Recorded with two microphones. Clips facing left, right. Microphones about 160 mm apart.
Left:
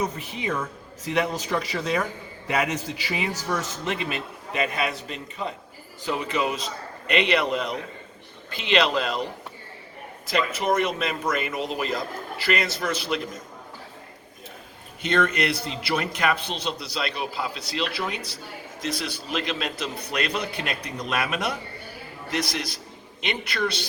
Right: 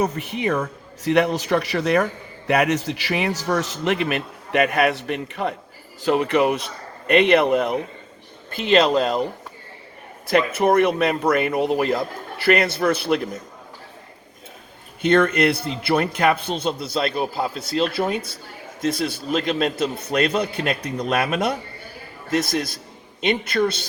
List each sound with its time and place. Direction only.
0.0 s a man's voice: 65° right (ahead or behind)
8.5 s a man's voice: 45° right (ahead or behind)
10.2 s speech: 55° right (ahead or behind)
15.0 s a man's voice: 50° right (ahead or behind)